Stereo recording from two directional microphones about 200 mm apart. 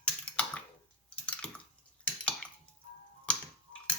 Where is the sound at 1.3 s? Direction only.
5° left (ahead or behind).